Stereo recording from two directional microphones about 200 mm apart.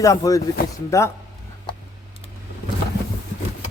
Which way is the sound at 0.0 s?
15° left (ahead or behind).